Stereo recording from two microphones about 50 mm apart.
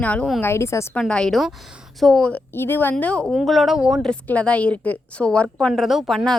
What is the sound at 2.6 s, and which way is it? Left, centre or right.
Speech, left.